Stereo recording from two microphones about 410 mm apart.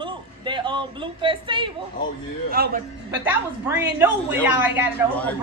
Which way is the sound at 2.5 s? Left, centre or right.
Right.